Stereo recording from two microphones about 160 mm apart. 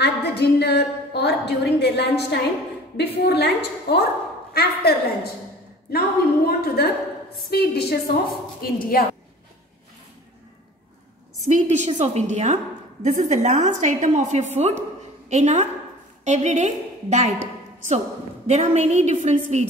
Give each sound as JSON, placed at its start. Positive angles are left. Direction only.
{"t": 0.0, "sound": "a woman's voice", "side_deg": 90}
{"t": 4.6, "sound": "a woman's voice", "side_deg": 80}
{"t": 7.5, "sound": "a woman's voice", "side_deg": 85}
{"t": 8.5, "sound": "a woman's voice", "side_deg": 70}
{"t": 11.4, "sound": "a woman's voice", "side_deg": -45}
{"t": 18.5, "sound": "a woman's voice", "side_deg": -40}